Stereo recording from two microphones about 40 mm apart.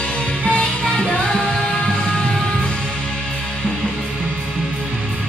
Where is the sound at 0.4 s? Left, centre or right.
Left.